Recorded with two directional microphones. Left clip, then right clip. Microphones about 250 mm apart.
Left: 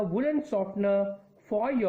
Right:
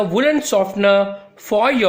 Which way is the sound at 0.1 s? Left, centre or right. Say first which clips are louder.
Right 12 dB; centre.